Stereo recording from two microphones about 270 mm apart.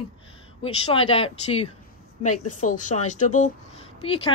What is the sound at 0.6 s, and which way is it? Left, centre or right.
Speech, left.